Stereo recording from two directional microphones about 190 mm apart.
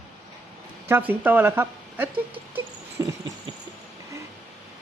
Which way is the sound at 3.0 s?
15° right (ahead or behind).